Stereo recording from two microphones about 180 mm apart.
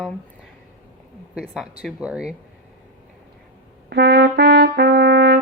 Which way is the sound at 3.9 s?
65° right (ahead or behind).